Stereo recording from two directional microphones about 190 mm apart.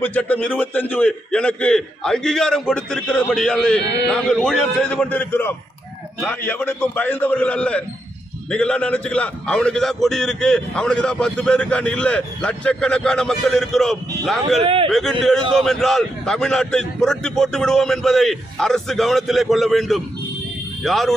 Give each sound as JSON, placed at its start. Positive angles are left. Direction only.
{"t": 0.0, "sound": "a man's voice", "side_deg": 10}
{"t": 14.6, "sound": "speech", "side_deg": -30}
{"t": 14.9, "sound": "a man's voice", "side_deg": 0}